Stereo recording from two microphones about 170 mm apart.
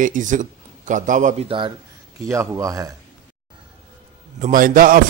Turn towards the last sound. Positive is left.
turn(degrees=-55)  # may be behind; listen again after turning